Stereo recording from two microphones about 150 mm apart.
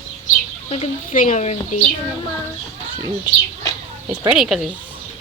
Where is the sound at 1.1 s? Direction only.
60° left (ahead or behind).